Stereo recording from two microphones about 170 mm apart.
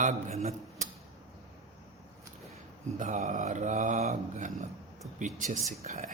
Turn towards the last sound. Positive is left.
turn(degrees=-40)  # may be behind; listen again after turning